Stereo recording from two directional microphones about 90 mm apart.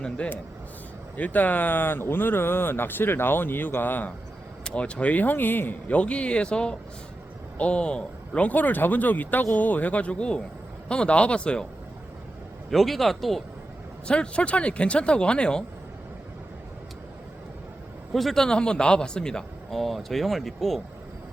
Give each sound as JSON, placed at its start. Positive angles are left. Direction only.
{"t": 0.0, "sound": "speech", "side_deg": 15}
{"t": 12.7, "sound": "speech", "side_deg": 0}
{"t": 18.1, "sound": "speech", "side_deg": 0}